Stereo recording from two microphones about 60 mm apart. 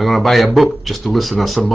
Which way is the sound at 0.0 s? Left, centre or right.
Centre.